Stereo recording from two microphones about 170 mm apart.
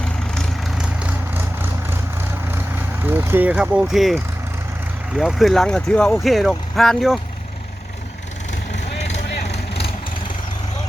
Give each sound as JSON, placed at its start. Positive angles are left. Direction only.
{"t": 0.3, "sound": "vehicle", "side_deg": -5}
{"t": 2.6, "sound": "speech", "side_deg": -10}
{"t": 9.3, "sound": "vehicle", "side_deg": 75}